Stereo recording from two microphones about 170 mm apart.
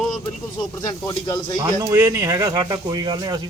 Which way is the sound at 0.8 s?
20° left (ahead or behind).